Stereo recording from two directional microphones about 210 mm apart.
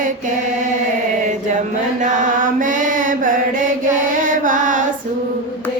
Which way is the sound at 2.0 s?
40° right (ahead or behind).